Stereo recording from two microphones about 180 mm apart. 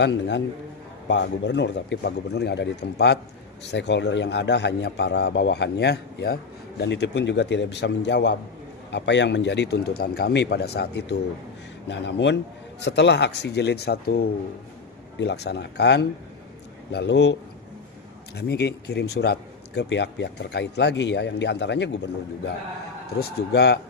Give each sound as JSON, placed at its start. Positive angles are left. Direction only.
{"t": 0.0, "sound": "a man's voice", "side_deg": 75}
{"t": 11.9, "sound": "a man's voice", "side_deg": 75}
{"t": 15.2, "sound": "a man's voice", "side_deg": 70}
{"t": 18.3, "sound": "a man's voice", "side_deg": 65}
{"t": 23.0, "sound": "speech", "side_deg": 65}